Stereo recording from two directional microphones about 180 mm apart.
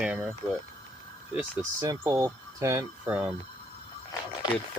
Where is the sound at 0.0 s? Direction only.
5° right (ahead or behind).